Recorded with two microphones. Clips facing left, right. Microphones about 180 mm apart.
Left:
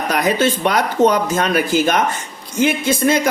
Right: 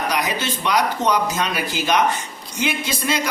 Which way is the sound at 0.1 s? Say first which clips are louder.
Left 7 dB; 50° left (ahead or behind).